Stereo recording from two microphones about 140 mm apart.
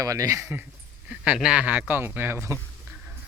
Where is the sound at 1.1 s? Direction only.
5° right (ahead or behind).